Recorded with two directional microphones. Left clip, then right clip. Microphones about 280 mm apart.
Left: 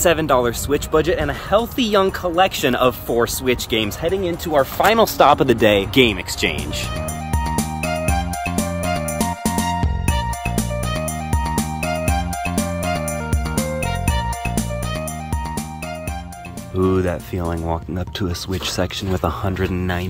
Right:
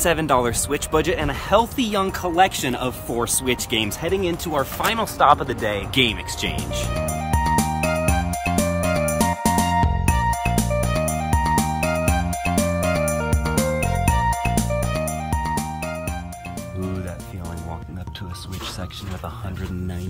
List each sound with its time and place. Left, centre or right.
0.0 s speech: centre
4.8 s speech: left
5.9 s speech: centre
7.0 s music: centre